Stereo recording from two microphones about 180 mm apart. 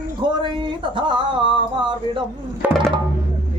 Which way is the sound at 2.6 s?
10° right (ahead or behind).